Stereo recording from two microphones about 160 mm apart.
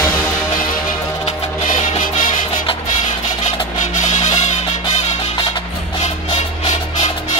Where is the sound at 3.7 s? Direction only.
50° left (ahead or behind).